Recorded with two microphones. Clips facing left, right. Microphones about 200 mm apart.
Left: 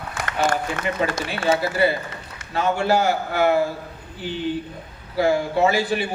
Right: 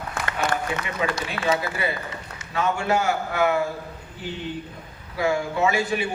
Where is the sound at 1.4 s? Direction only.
30° left (ahead or behind).